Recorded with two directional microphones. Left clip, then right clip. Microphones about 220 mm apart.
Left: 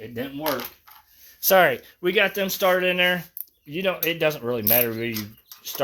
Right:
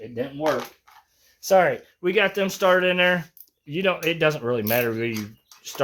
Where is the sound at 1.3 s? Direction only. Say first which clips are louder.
Left 1 dB; 45° left (ahead or behind).